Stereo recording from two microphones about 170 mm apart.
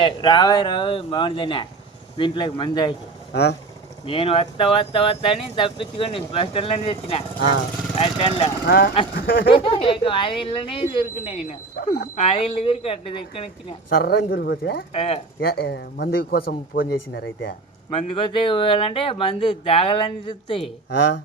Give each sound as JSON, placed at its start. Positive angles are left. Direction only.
{"t": 0.0, "sound": "speech", "side_deg": 25}
{"t": 4.0, "sound": "speech", "side_deg": 35}
{"t": 8.6, "sound": "speech", "side_deg": 65}
{"t": 9.5, "sound": "speech", "side_deg": 35}
{"t": 13.9, "sound": "speech", "side_deg": 65}
{"t": 14.9, "sound": "speech", "side_deg": 35}
{"t": 15.4, "sound": "speech", "side_deg": 65}
{"t": 16.1, "sound": "speech", "side_deg": 65}
{"t": 17.9, "sound": "speech", "side_deg": 30}